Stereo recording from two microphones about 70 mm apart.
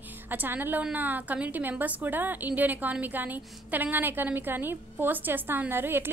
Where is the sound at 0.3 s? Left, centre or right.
Right.